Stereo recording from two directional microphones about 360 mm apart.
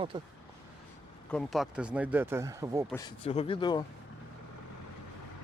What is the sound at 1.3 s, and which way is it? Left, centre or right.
Speech, centre.